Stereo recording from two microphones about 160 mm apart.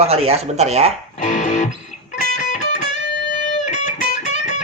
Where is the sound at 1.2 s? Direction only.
50° left (ahead or behind).